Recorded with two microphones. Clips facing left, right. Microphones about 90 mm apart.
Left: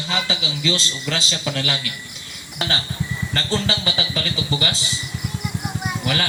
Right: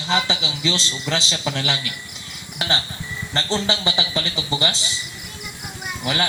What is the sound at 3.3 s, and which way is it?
A man's voice, 20° right (ahead or behind).